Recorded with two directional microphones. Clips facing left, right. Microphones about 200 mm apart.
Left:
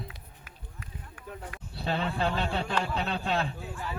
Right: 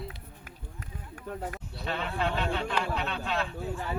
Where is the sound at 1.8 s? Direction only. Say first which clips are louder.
Left 2 dB; 35° left (ahead or behind).